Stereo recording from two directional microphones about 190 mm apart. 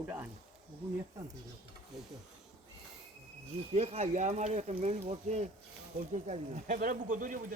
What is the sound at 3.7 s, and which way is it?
Speech, 35° right (ahead or behind).